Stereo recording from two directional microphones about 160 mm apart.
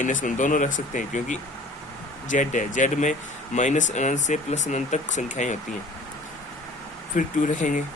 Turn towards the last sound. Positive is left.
turn(degrees=55)  # may be behind; listen again after turning